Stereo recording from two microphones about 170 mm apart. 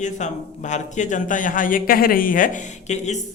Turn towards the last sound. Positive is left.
turn(degrees=45)  # may be behind; listen again after turning